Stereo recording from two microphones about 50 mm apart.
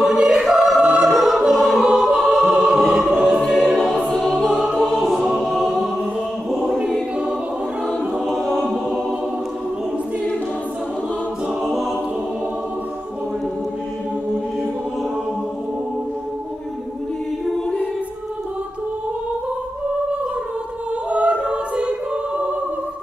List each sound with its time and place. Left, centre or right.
0.0 s choir: centre
1.0 s music: centre
2.0 s choir: centre
3.3 s choir: centre
3.7 s music: centre
4.5 s choir: right
5.4 s choir: centre
6.5 s choir: centre
8.4 s choir: centre
11.6 s choir: centre
21.1 s choir: right